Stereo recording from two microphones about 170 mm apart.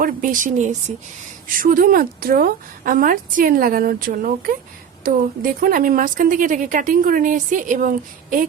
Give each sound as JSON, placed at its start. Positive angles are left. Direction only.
{"t": 0.0, "sound": "a woman's voice", "side_deg": -50}